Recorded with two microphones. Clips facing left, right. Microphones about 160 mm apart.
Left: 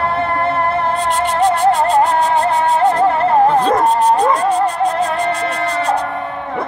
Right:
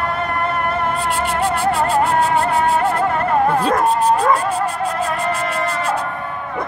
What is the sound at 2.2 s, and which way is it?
Music, 30° left (ahead or behind).